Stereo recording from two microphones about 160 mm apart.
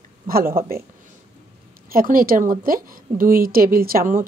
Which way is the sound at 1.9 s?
65° right (ahead or behind).